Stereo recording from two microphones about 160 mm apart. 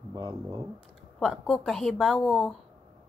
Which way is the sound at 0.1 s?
25° right (ahead or behind).